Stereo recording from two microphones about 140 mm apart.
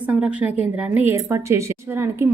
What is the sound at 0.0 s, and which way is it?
A woman's voice, 10° right (ahead or behind).